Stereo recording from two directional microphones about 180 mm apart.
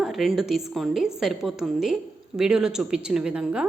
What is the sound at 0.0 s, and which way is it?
A woman's voice, centre (ahead or behind).